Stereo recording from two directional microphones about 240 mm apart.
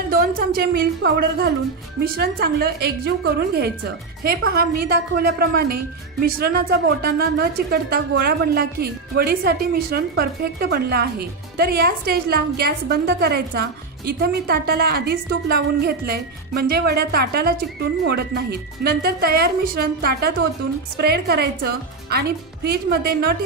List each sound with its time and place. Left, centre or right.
0.1 s a woman's voice: right